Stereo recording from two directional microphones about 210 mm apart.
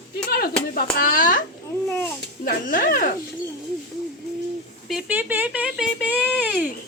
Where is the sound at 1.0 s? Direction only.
40° left (ahead or behind).